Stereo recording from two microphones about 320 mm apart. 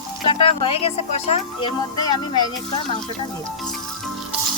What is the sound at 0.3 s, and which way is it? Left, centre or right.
Speech, centre.